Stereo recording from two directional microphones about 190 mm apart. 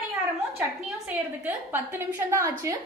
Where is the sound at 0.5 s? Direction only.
10° right (ahead or behind).